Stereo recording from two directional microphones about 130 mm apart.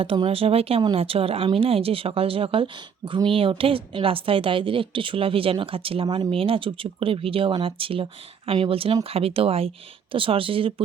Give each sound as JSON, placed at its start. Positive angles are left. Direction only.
{"t": 0.0, "sound": "a woman's voice", "side_deg": -45}